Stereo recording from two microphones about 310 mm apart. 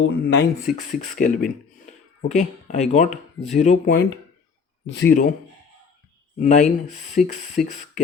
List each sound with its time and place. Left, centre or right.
0.0 s speech: left
6.4 s speech: left